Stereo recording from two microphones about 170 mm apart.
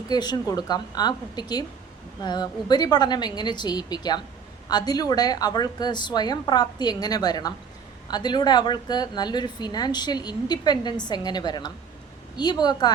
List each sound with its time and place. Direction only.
0.1 s a woman's voice: 25° left (ahead or behind)